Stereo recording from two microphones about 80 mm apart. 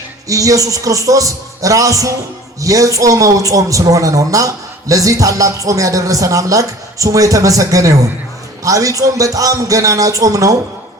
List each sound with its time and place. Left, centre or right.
0.3 s a man's voice: right